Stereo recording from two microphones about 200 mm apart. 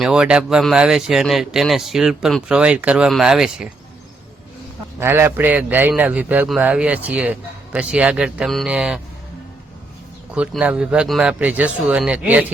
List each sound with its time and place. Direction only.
0.0 s a man's voice: 5° right (ahead or behind)
4.9 s a man's voice: 10° right (ahead or behind)
10.3 s a man's voice: 5° right (ahead or behind)